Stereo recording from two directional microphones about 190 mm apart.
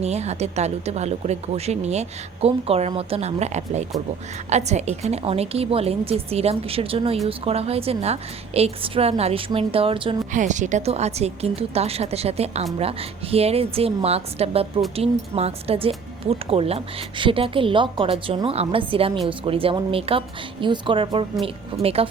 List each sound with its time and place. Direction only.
0.0 s speech: 35° right (ahead or behind)
10.3 s speech: 40° right (ahead or behind)